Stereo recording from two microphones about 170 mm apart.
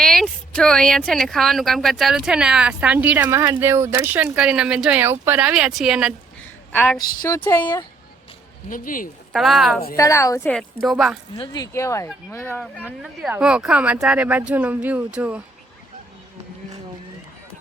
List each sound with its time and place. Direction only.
0.0 s speech: centre (ahead or behind)
6.4 s a sound: 10° left (ahead or behind)
7.3 s speech: 10° left (ahead or behind)
8.7 s speech: 55° left (ahead or behind)
9.3 s speech: centre (ahead or behind)
9.9 s a woman's voice: 20° left (ahead or behind)
10.8 s speech: centre (ahead or behind)
11.3 s speech: 20° left (ahead or behind)
13.0 s speech: 5° right (ahead or behind)